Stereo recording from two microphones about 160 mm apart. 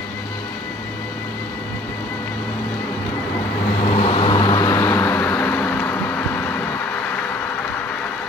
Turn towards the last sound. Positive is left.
turn(degrees=10)  # may be behind; listen again after turning